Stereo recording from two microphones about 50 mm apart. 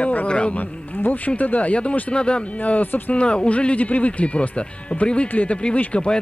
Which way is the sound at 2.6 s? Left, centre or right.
Left.